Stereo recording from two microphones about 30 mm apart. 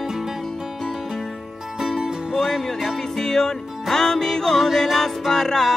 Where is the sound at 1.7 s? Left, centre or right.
Centre.